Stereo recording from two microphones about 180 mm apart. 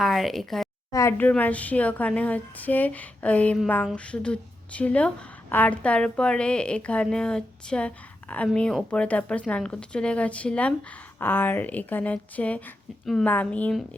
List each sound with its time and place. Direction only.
0.0 s a woman's voice: centre (ahead or behind)
0.9 s a woman's voice: 15° left (ahead or behind)